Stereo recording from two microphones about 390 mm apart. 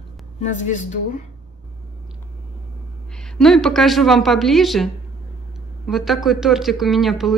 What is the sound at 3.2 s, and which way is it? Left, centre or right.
Speech, centre.